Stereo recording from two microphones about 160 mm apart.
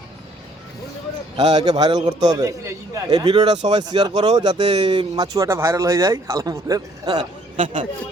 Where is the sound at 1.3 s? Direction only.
25° right (ahead or behind).